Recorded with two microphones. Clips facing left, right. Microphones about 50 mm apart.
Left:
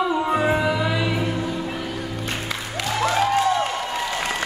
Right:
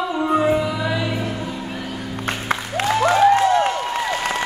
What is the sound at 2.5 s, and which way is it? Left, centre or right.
Music, right.